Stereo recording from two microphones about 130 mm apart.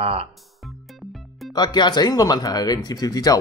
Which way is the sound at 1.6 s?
35° left (ahead or behind).